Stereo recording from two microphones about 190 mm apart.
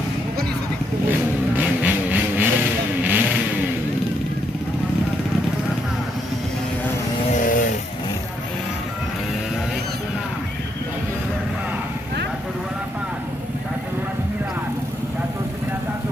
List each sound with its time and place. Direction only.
1.5 s vehicle: 10° right (ahead or behind)
7.3 s vehicle: 45° left (ahead or behind)